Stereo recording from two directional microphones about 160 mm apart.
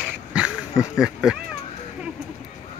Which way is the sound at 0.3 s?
5° right (ahead or behind).